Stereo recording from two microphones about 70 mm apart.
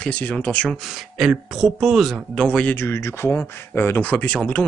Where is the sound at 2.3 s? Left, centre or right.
Centre.